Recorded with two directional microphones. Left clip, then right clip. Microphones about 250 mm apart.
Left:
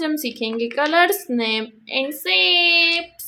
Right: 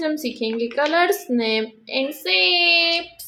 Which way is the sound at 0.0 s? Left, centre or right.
Centre.